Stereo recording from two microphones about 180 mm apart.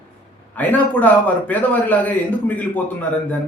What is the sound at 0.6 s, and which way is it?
A man's voice, 10° left (ahead or behind).